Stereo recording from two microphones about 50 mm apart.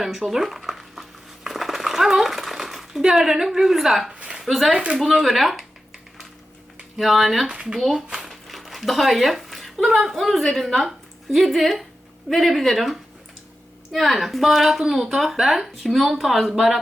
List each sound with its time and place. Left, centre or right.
0.0 s speech: centre
1.5 s a sound: centre
4.1 s a sound: centre
4.4 s a woman's voice: centre
6.9 s a woman's voice: centre
7.4 s a woman's voice: centre